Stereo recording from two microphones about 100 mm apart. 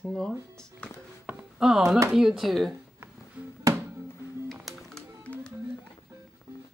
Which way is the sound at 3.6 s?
25° right (ahead or behind).